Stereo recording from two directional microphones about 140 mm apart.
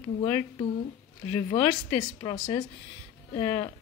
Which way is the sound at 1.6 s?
25° left (ahead or behind).